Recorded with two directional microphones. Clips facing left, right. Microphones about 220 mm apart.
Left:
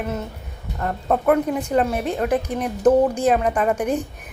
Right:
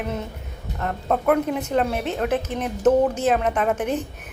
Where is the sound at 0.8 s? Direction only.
5° left (ahead or behind).